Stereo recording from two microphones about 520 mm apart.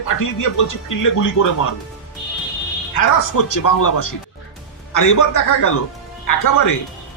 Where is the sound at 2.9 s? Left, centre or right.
Left.